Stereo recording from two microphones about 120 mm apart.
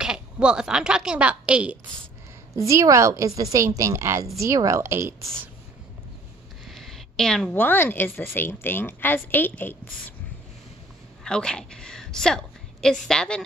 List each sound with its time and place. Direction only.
0.0 s a woman's voice: 5° right (ahead or behind)
2.7 s a woman's voice: 25° right (ahead or behind)
6.7 s a sound: 5° left (ahead or behind)
7.5 s a woman's voice: 15° left (ahead or behind)
11.2 s a woman's voice: 5° left (ahead or behind)